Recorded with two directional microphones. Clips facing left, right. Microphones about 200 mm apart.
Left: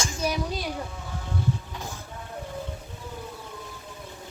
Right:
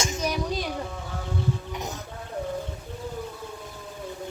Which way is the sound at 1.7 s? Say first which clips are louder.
Right 4 dB; 20° right (ahead or behind).